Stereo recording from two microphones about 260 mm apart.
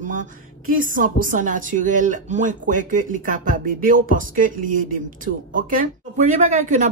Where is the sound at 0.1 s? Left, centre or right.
Right.